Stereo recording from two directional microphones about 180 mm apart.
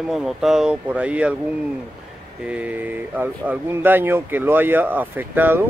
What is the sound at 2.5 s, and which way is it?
Speech, 10° right (ahead or behind).